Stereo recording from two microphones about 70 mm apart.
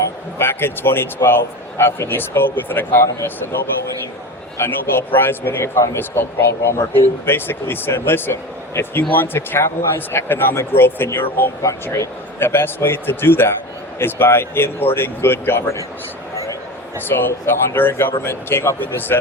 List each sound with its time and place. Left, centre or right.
0.3 s speech: left
4.5 s speech: left
16.3 s a sound: left
17.1 s speech: left